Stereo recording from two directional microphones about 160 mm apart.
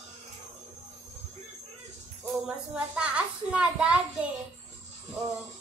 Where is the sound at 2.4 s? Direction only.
5° right (ahead or behind).